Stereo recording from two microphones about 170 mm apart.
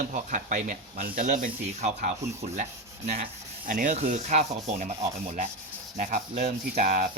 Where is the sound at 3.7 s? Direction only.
50° right (ahead or behind).